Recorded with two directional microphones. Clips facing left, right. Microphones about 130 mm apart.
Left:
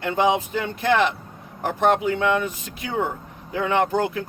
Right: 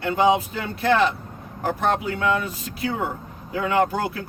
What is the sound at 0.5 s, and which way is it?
Speech, 35° right (ahead or behind).